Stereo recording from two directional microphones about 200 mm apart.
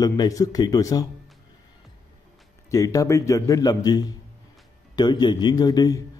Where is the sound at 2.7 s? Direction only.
15° left (ahead or behind).